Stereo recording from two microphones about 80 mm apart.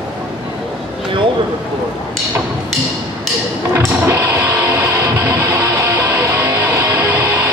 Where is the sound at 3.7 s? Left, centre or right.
Right.